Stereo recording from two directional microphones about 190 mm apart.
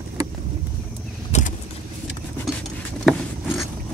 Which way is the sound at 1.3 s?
40° left (ahead or behind).